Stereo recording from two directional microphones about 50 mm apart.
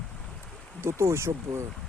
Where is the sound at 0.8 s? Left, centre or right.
Right.